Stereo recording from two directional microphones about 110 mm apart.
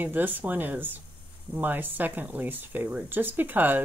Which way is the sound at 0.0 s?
15° right (ahead or behind).